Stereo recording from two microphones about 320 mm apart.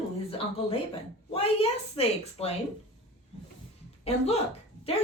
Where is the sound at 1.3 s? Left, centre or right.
Centre.